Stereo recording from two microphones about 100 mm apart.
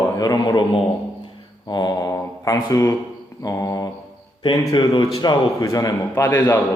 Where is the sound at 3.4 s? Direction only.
35° left (ahead or behind).